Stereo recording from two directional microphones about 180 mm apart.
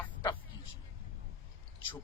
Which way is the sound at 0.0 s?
15° left (ahead or behind).